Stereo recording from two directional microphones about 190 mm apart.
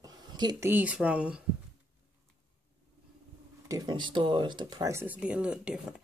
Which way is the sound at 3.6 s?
20° right (ahead or behind).